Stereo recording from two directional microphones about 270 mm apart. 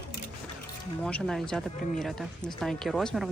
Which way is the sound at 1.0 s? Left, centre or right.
Centre.